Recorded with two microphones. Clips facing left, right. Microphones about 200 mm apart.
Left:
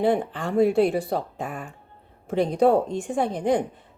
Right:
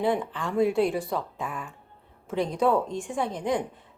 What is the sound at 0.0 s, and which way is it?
Speech, 60° left (ahead or behind).